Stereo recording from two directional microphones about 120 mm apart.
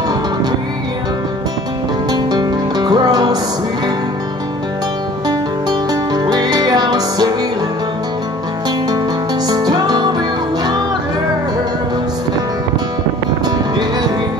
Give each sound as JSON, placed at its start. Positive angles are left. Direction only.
{"t": 2.0, "sound": "music", "side_deg": -35}
{"t": 5.7, "sound": "music", "side_deg": -35}
{"t": 9.5, "sound": "music", "side_deg": -35}